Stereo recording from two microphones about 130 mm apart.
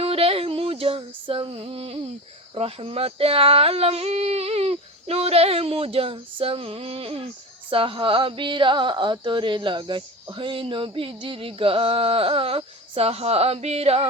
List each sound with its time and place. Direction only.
0.0 s female singing: 45° right (ahead or behind)
2.6 s speech: 50° right (ahead or behind)